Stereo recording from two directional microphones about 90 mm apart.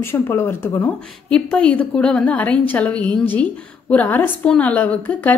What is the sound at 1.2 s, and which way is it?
A woman's voice, 10° left (ahead or behind).